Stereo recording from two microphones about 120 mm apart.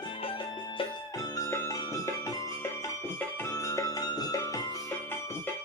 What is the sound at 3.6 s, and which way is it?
Music, 30° left (ahead or behind).